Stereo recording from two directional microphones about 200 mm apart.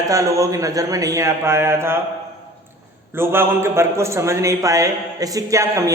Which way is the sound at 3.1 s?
10° right (ahead or behind).